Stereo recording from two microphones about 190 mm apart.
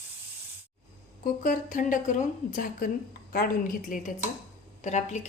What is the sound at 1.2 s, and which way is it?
A woman's voice, 45° left (ahead or behind).